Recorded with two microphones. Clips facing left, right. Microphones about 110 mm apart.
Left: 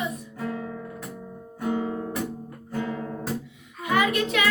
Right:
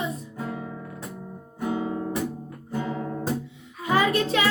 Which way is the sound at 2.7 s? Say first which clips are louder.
Right 1 dB; 20° right (ahead or behind).